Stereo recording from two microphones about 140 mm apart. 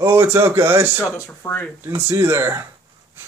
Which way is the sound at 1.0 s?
20° left (ahead or behind).